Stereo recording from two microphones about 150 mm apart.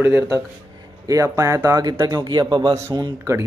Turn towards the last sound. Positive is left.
turn(degrees=-30)  # may be behind; listen again after turning